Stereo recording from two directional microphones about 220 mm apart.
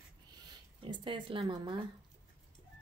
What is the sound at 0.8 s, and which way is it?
Speech, 20° right (ahead or behind).